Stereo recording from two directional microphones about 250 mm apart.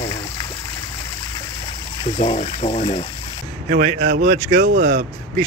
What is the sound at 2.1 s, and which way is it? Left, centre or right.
Speech, left.